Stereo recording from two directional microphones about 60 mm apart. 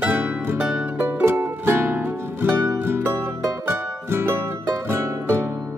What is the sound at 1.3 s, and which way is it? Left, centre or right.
Music, right.